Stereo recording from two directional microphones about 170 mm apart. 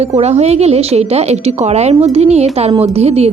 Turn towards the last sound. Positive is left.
turn(degrees=-35)  # may be behind; listen again after turning